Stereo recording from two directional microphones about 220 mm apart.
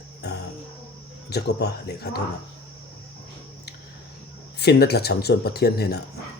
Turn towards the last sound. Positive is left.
turn(degrees=45)  # may be behind; listen again after turning